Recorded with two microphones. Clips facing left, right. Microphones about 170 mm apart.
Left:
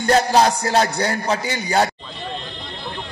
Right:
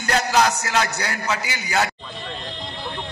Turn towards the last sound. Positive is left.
turn(degrees=35)  # may be behind; listen again after turning